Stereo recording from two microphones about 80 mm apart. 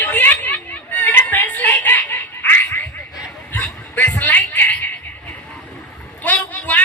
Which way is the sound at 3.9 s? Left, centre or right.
Left.